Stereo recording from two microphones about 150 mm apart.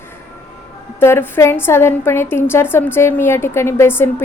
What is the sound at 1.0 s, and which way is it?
A woman's voice, 15° left (ahead or behind).